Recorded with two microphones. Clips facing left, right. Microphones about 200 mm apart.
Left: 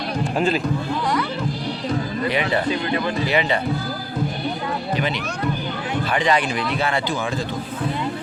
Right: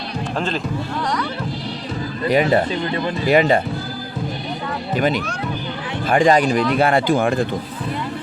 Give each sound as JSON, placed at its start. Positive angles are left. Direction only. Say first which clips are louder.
{"t": 0.3, "sound": "speech", "louder": "left 3 dB", "side_deg": 10}
{"t": 2.3, "sound": "speech", "louder": "right 7 dB", "side_deg": -45}
{"t": 4.9, "sound": "speech", "louder": "right 4 dB", "side_deg": -45}